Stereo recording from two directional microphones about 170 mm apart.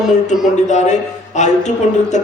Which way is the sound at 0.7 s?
45° left (ahead or behind).